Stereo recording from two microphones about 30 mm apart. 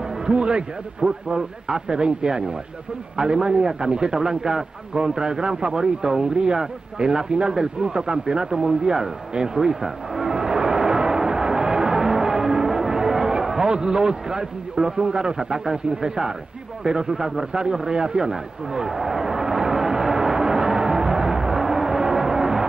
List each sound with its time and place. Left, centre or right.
0.3 s speech: right
1.3 s a man's voice: right
8.5 s vehicle: right
16.8 s a man's voice: right
18.9 s speech: centre
19.1 s music: centre